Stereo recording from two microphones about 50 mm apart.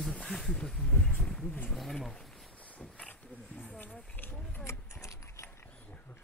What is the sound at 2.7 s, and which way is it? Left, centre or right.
Wild animals, left.